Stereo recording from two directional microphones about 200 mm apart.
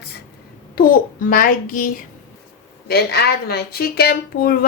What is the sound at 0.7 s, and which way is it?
A woman's voice, 45° left (ahead or behind).